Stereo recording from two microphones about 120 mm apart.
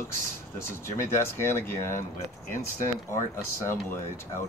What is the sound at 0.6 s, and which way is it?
Speech, 20° left (ahead or behind).